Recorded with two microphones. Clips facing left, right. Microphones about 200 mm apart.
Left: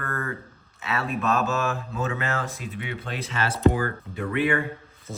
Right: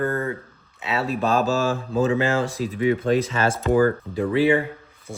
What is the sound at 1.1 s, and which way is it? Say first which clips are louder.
Speech: right 4 dB; 30° right (ahead or behind).